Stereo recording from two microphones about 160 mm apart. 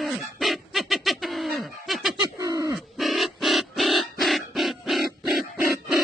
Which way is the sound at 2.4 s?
20° right (ahead or behind).